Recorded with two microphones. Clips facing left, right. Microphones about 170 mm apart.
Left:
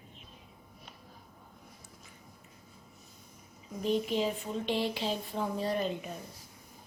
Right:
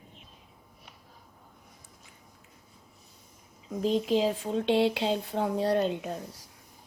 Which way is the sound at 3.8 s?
90° right.